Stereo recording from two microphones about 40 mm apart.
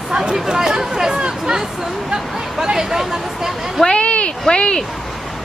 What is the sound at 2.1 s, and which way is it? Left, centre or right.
Hubbub, centre.